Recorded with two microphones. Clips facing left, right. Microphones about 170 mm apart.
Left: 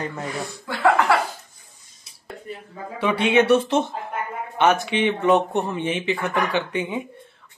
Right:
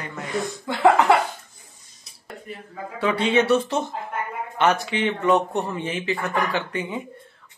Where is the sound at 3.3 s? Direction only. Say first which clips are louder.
Left 4 dB; 20° left (ahead or behind).